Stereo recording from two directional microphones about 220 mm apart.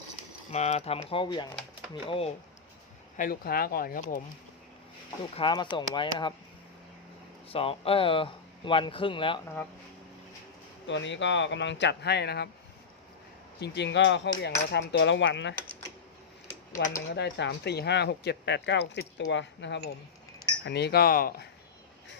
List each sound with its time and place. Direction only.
0.5 s speech: 30° left (ahead or behind)
3.2 s speech: 40° left (ahead or behind)
5.4 s speech: 20° left (ahead or behind)
7.5 s speech: 25° left (ahead or behind)
10.8 s speech: 55° left (ahead or behind)
13.6 s speech: 50° left (ahead or behind)
17.1 s speech: 55° left (ahead or behind)